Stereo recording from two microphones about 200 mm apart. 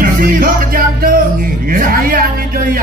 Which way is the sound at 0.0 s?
45° right (ahead or behind).